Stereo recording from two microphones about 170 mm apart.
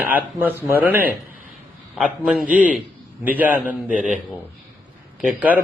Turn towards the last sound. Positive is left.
turn(degrees=-5)  # may be behind; listen again after turning